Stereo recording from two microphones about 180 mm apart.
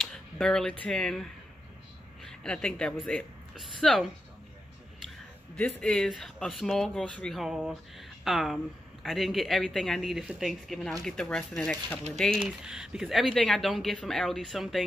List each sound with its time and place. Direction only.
0.0 s speech: 5° left (ahead or behind)
5.6 s speech: 5° left (ahead or behind)